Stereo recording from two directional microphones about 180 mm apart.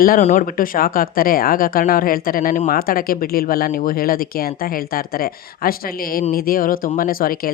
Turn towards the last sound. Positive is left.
turn(degrees=55)  # may be behind; listen again after turning